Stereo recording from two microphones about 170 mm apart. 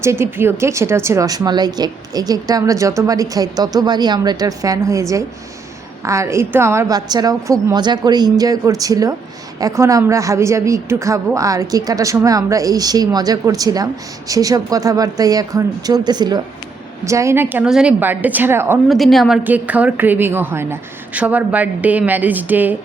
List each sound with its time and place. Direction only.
0.0 s a woman's voice: 15° right (ahead or behind)
18.9 s a woman's voice: centre (ahead or behind)